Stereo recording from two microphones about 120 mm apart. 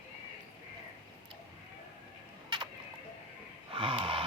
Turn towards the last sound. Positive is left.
turn(degrees=-45)  # may be behind; listen again after turning